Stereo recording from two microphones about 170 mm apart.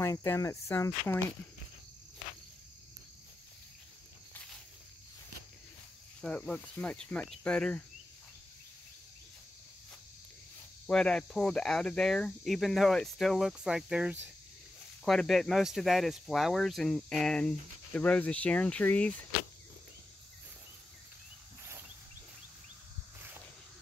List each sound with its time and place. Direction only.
0.0 s speech: 15° left (ahead or behind)
6.2 s speech: 5° left (ahead or behind)
10.9 s speech: 5° left (ahead or behind)